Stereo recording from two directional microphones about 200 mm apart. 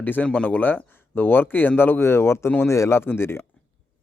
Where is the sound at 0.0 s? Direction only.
10° left (ahead or behind).